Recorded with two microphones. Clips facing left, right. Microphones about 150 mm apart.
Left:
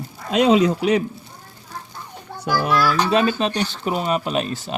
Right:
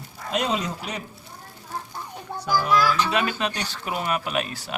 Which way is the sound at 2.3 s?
20° right (ahead or behind).